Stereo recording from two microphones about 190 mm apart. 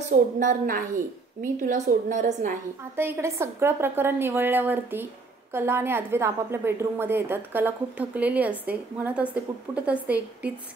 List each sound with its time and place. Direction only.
0.4 s a woman's voice: 45° right (ahead or behind)
3.0 s a woman's voice: 15° right (ahead or behind)